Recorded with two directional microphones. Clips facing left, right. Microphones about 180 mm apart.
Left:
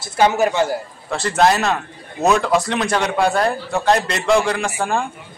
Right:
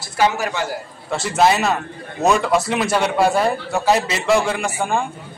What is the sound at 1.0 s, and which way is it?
A man's voice, centre (ahead or behind).